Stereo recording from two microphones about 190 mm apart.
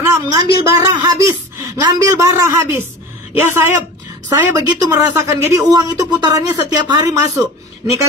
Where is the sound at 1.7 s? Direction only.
15° right (ahead or behind).